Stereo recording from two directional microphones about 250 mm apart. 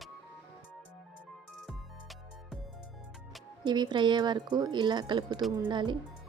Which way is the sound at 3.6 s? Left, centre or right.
Centre.